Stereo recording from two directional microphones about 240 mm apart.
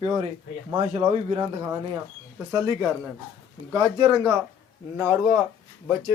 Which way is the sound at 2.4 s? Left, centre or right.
Centre.